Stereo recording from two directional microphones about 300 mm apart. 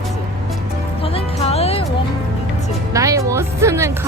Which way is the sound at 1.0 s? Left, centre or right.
Centre.